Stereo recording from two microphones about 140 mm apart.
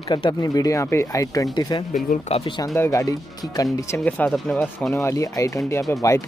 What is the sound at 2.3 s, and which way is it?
Speech, 40° left (ahead or behind).